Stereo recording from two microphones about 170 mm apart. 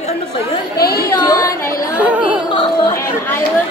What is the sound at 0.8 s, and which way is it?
Speech, 65° left (ahead or behind).